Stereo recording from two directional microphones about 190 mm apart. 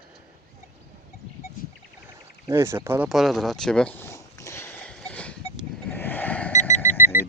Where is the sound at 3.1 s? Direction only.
Centre (ahead or behind).